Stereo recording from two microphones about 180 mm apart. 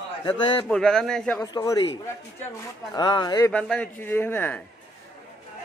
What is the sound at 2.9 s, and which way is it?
Speech, 25° left (ahead or behind).